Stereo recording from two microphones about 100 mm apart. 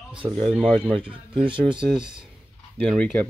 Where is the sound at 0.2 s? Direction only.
45° right (ahead or behind).